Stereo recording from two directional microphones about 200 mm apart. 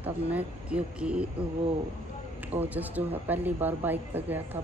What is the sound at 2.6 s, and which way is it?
A woman's voice, 10° right (ahead or behind).